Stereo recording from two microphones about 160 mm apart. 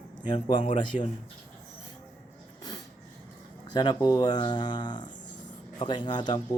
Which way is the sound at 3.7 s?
25° left (ahead or behind).